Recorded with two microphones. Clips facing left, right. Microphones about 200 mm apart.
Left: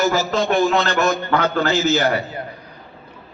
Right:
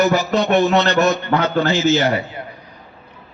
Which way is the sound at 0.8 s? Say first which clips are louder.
Right 3 dB; 50° left (ahead or behind).